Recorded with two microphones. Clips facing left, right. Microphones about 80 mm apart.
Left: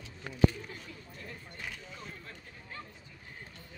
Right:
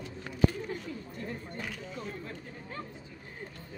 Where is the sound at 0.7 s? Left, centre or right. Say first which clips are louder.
Right 9 dB; right.